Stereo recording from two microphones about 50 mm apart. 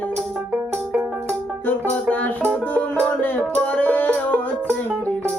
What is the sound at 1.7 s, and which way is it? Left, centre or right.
Music, left.